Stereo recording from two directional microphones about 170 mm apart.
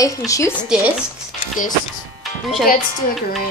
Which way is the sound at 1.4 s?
50° left (ahead or behind).